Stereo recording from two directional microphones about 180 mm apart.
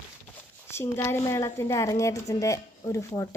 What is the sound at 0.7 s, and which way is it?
A woman's voice, 15° left (ahead or behind).